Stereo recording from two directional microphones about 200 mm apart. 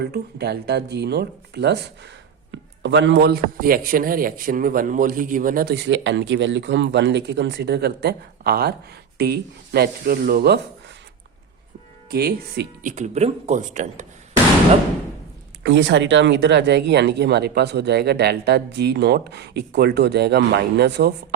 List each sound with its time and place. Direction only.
0.0 s a man's voice: 55° right (ahead or behind)
12.1 s a man's voice: 50° right (ahead or behind)
13.0 s speech: 35° right (ahead or behind)
15.6 s speech: 65° right (ahead or behind)